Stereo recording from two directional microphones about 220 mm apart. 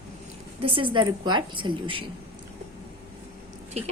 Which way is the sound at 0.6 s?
25° right (ahead or behind).